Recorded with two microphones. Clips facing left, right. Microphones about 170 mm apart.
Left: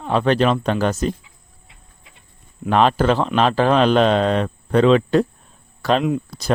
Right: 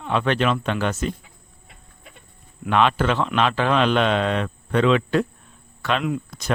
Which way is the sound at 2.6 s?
35° left (ahead or behind).